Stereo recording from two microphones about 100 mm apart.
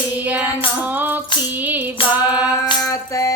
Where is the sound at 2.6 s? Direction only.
40° left (ahead or behind).